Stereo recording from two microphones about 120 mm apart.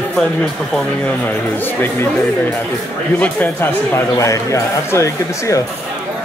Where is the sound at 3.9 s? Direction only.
25° left (ahead or behind).